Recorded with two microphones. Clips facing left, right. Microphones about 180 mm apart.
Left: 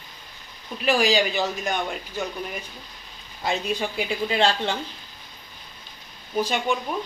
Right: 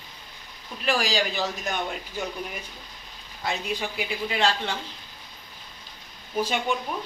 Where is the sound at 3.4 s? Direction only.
25° left (ahead or behind).